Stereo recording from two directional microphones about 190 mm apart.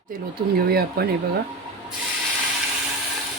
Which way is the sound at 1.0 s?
55° right (ahead or behind).